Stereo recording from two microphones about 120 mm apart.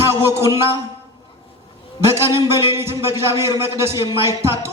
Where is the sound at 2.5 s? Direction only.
20° right (ahead or behind).